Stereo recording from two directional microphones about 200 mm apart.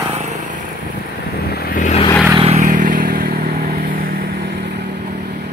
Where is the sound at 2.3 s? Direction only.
30° right (ahead or behind).